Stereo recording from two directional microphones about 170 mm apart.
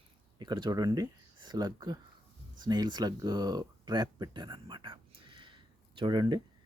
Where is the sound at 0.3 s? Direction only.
25° right (ahead or behind).